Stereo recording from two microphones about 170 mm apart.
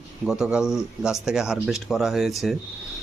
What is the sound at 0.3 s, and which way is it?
A man's voice, 5° right (ahead or behind).